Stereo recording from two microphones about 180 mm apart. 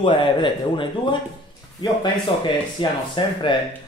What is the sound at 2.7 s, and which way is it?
Speech, 25° left (ahead or behind).